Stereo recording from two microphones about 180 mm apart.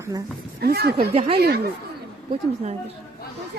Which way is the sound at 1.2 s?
30° right (ahead or behind).